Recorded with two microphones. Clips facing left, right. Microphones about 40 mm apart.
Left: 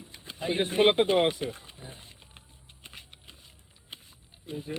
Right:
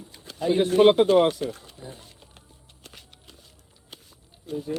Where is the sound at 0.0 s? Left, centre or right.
Centre.